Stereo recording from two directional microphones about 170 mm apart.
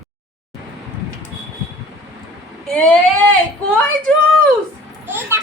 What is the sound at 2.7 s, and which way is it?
Speech, 5° left (ahead or behind).